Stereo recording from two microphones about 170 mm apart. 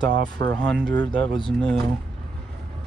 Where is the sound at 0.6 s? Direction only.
10° left (ahead or behind).